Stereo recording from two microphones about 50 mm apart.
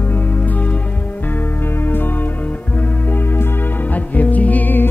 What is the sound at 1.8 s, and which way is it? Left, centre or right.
Music, left.